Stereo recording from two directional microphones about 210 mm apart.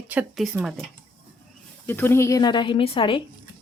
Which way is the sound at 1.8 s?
10° left (ahead or behind).